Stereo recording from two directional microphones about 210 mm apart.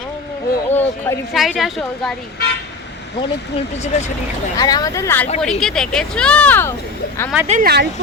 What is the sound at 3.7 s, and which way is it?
Speech, 30° left (ahead or behind).